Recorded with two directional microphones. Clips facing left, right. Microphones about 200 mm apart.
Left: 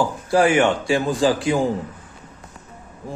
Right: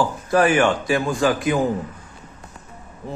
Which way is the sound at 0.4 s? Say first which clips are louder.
Left 1 dB; 25° left (ahead or behind).